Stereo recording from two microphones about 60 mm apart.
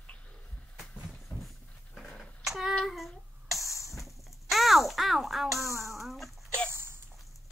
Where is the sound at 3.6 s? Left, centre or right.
Left.